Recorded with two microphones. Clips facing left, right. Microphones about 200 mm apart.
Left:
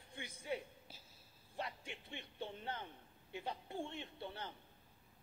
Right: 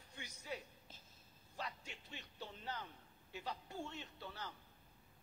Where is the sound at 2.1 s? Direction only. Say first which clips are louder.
Left 5 dB; 25° left (ahead or behind).